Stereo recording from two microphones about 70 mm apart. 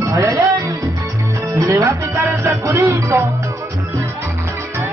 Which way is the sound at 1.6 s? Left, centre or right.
Right.